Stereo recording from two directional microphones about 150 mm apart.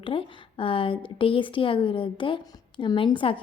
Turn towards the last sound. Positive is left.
turn(degrees=35)  # may be behind; listen again after turning